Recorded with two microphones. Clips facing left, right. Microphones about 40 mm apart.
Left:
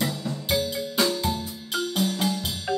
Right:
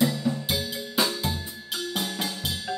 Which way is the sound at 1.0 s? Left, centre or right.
Centre.